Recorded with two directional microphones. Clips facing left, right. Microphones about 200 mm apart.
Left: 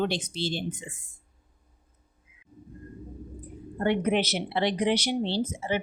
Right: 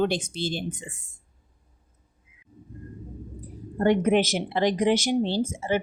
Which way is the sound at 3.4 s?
40° right (ahead or behind).